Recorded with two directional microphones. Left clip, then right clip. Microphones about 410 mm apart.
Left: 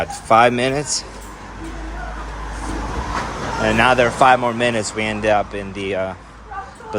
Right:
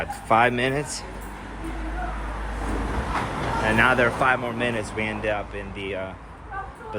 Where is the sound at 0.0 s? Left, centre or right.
Centre.